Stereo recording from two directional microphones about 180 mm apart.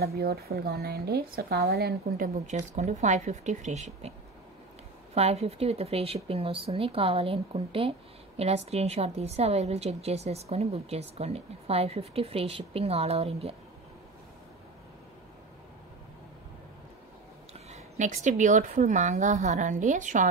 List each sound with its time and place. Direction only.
0.0 s speech: 60° right (ahead or behind); by 4.1 s 40° right (ahead or behind)
5.1 s a woman's voice: 35° right (ahead or behind)
17.6 s a woman's voice: 40° right (ahead or behind)